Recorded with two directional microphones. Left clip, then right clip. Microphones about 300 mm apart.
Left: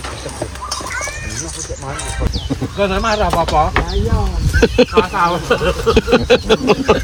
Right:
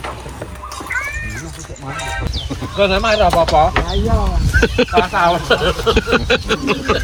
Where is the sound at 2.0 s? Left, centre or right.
Right.